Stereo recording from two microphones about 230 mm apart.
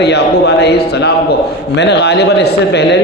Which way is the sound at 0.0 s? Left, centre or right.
Left.